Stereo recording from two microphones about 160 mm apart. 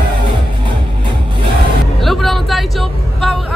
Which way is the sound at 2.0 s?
Centre (ahead or behind).